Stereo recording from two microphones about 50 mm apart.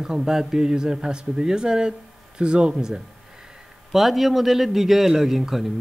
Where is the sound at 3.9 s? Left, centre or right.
Centre.